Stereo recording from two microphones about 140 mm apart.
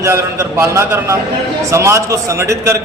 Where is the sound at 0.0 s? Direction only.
20° right (ahead or behind).